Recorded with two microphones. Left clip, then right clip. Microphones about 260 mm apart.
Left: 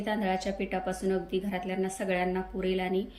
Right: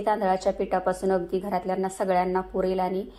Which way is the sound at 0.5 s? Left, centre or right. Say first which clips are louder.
Right 8 dB; right.